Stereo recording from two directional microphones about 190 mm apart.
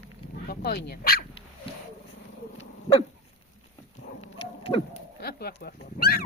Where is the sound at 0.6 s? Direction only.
55° left (ahead or behind).